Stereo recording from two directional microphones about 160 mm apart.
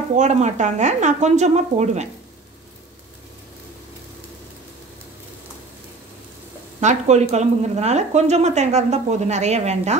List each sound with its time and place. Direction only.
0.1 s speech: 45° right (ahead or behind)
6.8 s speech: 45° right (ahead or behind)